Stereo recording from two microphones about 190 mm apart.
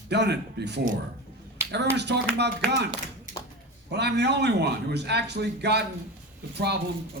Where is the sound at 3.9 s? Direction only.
60° right (ahead or behind).